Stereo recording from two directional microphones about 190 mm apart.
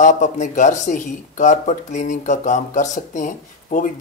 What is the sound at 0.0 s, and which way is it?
Speech, 40° left (ahead or behind).